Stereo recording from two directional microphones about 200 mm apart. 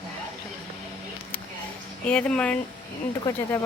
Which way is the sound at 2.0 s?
5° left (ahead or behind).